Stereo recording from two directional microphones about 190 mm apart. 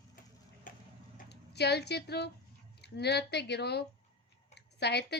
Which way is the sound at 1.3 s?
60° left (ahead or behind).